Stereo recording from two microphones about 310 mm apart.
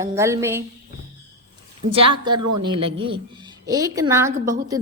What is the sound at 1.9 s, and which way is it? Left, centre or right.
A woman's voice, centre.